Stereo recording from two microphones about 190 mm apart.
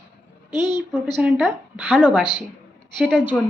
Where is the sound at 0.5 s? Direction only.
20° left (ahead or behind).